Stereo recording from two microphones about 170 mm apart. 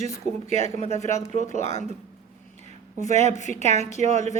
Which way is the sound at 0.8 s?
40° left (ahead or behind).